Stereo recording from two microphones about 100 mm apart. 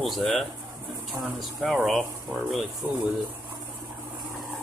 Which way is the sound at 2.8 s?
20° right (ahead or behind).